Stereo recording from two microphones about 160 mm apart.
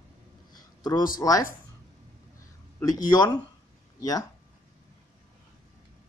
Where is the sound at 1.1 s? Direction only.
20° left (ahead or behind).